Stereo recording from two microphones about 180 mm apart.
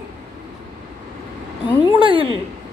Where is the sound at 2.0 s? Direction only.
30° right (ahead or behind).